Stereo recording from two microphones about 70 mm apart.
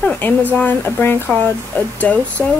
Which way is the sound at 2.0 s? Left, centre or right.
Left.